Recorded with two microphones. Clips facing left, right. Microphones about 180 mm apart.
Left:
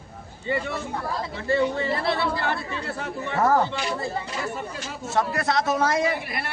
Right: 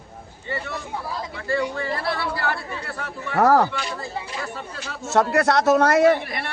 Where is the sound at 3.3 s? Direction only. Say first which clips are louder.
Right 4 dB; 75° right (ahead or behind).